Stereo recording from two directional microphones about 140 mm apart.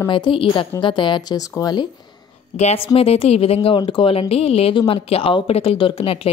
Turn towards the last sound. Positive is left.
turn(degrees=45)  # may be behind; listen again after turning